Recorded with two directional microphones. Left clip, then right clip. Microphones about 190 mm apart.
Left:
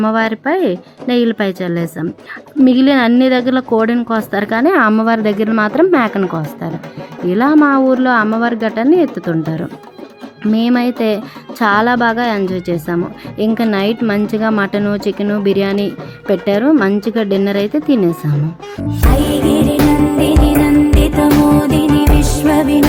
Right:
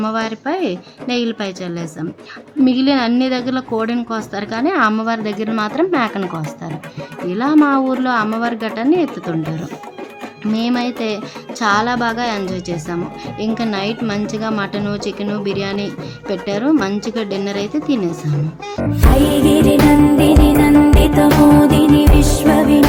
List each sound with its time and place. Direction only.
0.0 s a woman's voice: 30° left (ahead or behind)
18.8 s music: centre (ahead or behind)